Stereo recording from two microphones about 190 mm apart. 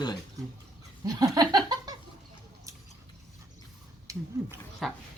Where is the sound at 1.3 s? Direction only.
20° right (ahead or behind).